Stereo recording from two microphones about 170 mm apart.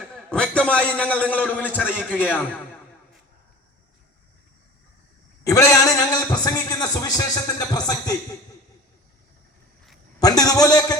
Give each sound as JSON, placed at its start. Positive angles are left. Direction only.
{"t": 0.0, "sound": "a man's voice", "side_deg": 5}
{"t": 5.4, "sound": "a man's voice", "side_deg": 20}
{"t": 10.2, "sound": "a man's voice", "side_deg": 20}